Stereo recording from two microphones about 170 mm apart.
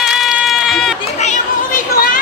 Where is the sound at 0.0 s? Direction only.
Centre (ahead or behind).